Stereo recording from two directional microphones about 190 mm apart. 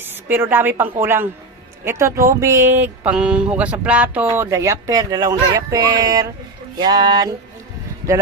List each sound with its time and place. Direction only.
0.0 s a woman's voice: 10° right (ahead or behind)
1.8 s a sound: 15° right (ahead or behind)
6.7 s speech: 25° right (ahead or behind)